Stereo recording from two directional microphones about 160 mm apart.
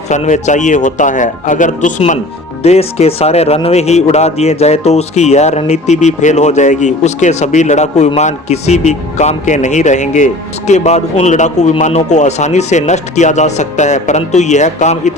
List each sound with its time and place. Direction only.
0.1 s speech: 50° left (ahead or behind)
2.6 s speech: 40° left (ahead or behind)